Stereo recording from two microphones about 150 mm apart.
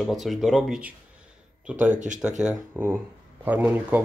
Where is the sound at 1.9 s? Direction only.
55° right (ahead or behind).